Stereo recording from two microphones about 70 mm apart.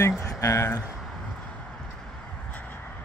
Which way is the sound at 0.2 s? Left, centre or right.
Left.